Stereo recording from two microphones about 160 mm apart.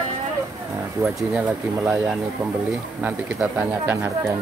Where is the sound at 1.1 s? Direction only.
5° right (ahead or behind).